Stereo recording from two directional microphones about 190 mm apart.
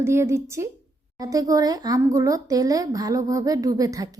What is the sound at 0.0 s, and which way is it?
Speech, 15° right (ahead or behind).